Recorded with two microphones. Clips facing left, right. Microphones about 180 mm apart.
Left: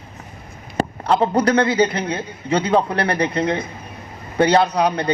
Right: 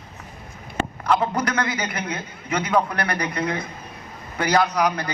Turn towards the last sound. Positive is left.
turn(degrees=30)  # may be behind; listen again after turning